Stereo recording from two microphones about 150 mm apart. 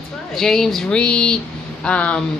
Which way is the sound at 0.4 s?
5° left (ahead or behind).